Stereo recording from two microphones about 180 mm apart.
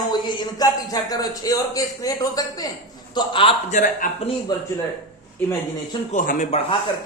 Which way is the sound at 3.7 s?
45° left (ahead or behind).